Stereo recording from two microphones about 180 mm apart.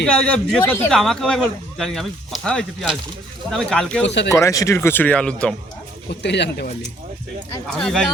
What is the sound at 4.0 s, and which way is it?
Speech, 75° left (ahead or behind).